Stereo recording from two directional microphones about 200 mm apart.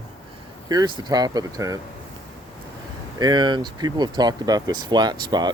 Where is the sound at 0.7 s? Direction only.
20° right (ahead or behind).